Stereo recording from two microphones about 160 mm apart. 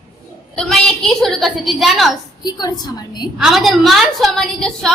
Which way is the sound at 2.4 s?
25° left (ahead or behind).